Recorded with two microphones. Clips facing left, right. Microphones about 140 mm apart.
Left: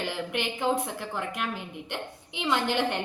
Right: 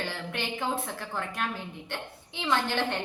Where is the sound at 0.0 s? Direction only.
15° left (ahead or behind).